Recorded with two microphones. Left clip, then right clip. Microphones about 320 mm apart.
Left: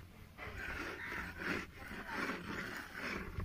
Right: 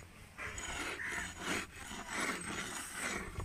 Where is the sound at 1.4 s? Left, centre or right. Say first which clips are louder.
Left 1 dB; centre.